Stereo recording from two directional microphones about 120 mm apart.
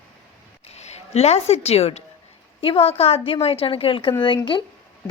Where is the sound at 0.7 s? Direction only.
65° left (ahead or behind).